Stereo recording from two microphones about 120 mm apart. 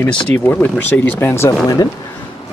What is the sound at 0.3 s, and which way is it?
Speech, 15° left (ahead or behind).